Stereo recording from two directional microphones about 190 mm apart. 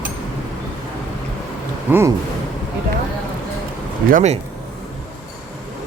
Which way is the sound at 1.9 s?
15° right (ahead or behind).